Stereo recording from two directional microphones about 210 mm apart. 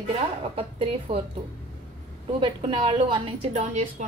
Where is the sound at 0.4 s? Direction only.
25° right (ahead or behind).